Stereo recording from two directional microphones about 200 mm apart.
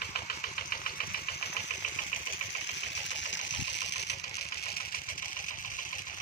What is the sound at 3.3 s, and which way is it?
Engine, 60° left (ahead or behind).